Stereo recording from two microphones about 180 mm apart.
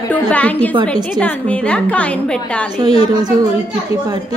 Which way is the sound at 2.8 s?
25° right (ahead or behind).